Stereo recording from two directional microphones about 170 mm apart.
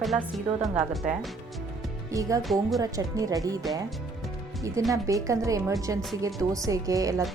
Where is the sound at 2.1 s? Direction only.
20° right (ahead or behind).